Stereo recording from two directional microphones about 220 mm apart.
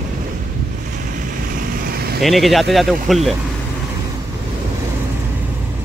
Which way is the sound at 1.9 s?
45° right (ahead or behind).